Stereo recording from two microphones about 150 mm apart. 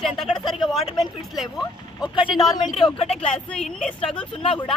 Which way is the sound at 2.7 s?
35° left (ahead or behind).